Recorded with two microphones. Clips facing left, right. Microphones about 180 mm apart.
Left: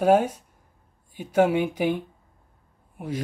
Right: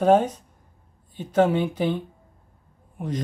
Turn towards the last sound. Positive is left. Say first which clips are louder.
# right 1 dB
turn(degrees=10)  # may be behind; listen again after turning